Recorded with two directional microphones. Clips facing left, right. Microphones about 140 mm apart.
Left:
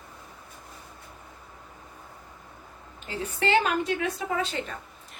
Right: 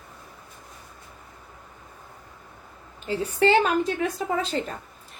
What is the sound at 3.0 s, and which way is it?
A woman's voice, 35° right (ahead or behind).